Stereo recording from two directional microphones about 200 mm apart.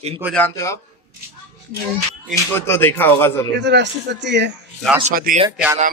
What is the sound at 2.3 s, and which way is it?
Speech, 10° left (ahead or behind).